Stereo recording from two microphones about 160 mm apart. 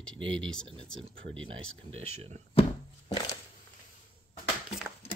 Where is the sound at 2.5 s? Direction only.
35° left (ahead or behind).